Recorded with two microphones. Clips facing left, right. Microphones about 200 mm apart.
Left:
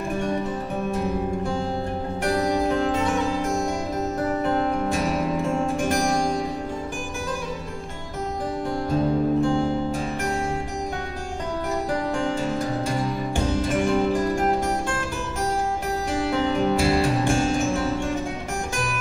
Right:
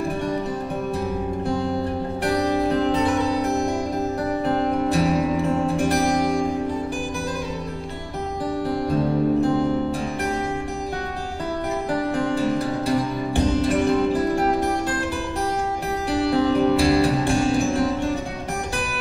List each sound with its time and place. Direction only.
2.2 s music: 35° right (ahead or behind)
8.6 s music: 35° right (ahead or behind)
12.1 s music: 35° right (ahead or behind)
16.1 s music: 35° right (ahead or behind)